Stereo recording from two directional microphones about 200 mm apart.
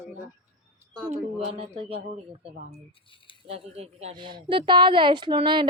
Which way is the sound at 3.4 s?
30° right (ahead or behind).